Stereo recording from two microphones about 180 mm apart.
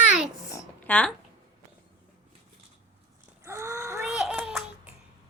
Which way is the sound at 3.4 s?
15° right (ahead or behind).